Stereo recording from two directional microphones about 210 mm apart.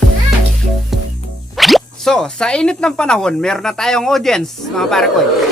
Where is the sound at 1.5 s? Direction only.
Centre (ahead or behind).